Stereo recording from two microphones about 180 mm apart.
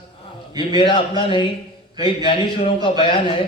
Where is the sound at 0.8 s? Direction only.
25° left (ahead or behind).